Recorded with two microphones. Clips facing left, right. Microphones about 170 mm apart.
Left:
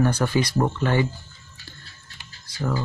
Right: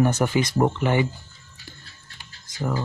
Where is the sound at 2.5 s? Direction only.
20° right (ahead or behind).